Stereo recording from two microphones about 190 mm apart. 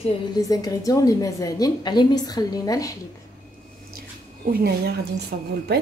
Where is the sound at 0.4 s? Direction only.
20° left (ahead or behind).